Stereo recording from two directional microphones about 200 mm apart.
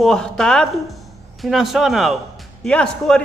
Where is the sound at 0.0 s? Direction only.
5° left (ahead or behind).